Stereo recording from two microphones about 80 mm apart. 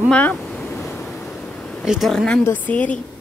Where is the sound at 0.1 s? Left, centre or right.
Centre.